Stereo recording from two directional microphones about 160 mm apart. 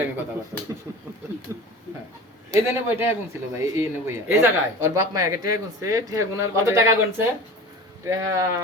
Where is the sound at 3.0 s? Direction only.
15° right (ahead or behind).